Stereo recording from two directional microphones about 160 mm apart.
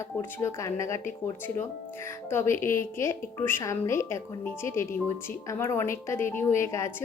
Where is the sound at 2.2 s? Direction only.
15° left (ahead or behind).